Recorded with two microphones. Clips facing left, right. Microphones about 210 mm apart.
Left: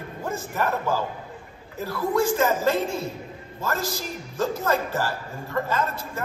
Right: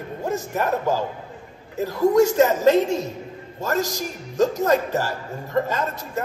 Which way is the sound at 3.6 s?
40° right (ahead or behind).